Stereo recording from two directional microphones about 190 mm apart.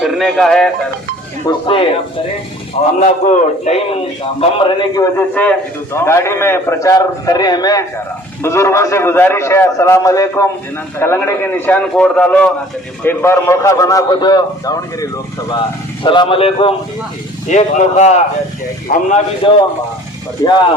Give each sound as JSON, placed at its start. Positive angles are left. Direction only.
{"t": 0.0, "sound": "speech", "side_deg": 0}
{"t": 1.5, "sound": "a man's voice", "side_deg": 25}
{"t": 3.0, "sound": "a man's voice", "side_deg": 35}
{"t": 4.4, "sound": "a man's voice", "side_deg": 25}
{"t": 5.1, "sound": "a man's voice", "side_deg": 10}
{"t": 19.4, "sound": "a man's voice", "side_deg": 25}